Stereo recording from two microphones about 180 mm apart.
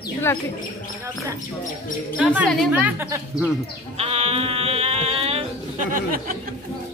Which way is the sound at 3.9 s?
35° right (ahead or behind).